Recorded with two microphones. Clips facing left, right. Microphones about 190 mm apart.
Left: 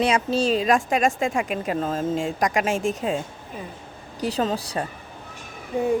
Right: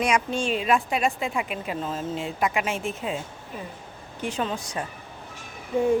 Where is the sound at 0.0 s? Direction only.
35° left (ahead or behind).